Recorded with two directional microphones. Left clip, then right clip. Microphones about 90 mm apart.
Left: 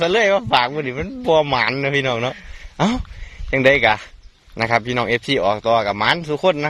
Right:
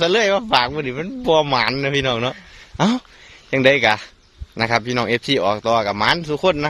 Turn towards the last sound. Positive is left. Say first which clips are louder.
# even
turn(degrees=-40)  # may be behind; listen again after turning